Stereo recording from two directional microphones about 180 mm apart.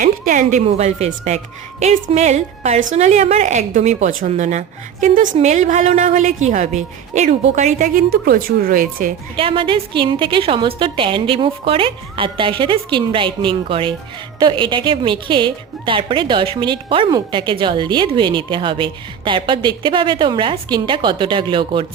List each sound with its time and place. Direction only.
0.0 s a woman's voice: 45° right (ahead or behind)
9.3 s a woman's voice: 30° right (ahead or behind)